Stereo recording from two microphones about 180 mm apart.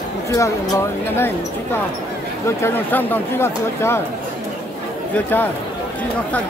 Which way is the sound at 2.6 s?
10° left (ahead or behind).